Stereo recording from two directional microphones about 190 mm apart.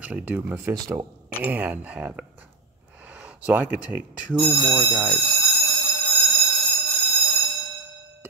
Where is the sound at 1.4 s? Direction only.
10° right (ahead or behind).